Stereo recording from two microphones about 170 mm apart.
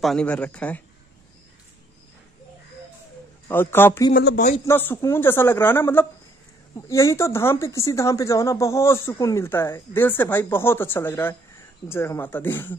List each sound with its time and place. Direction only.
0.0 s speech: 5° left (ahead or behind)
3.4 s speech: 15° left (ahead or behind)